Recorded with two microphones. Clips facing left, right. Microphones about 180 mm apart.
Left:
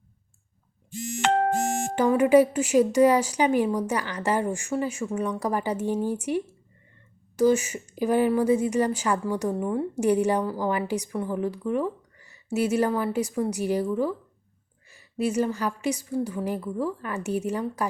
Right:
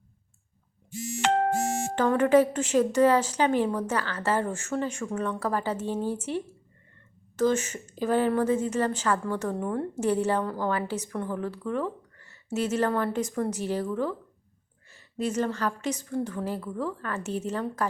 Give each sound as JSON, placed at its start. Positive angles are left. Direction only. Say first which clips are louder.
{"t": 1.2, "sound": "music", "louder": "left 2 dB", "side_deg": 55}
{"t": 2.0, "sound": "a woman's voice", "louder": "left 3 dB", "side_deg": 10}